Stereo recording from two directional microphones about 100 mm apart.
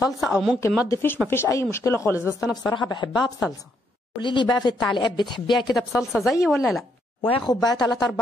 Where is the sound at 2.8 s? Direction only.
50° left (ahead or behind).